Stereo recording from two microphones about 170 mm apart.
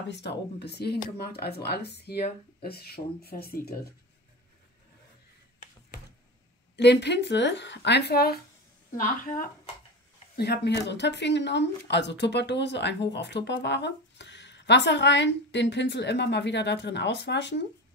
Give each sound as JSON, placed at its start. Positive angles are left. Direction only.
{"t": 0.1, "sound": "speech", "side_deg": 80}
{"t": 6.8, "sound": "speech", "side_deg": 85}
{"t": 8.9, "sound": "speech", "side_deg": 55}
{"t": 10.3, "sound": "speech", "side_deg": 75}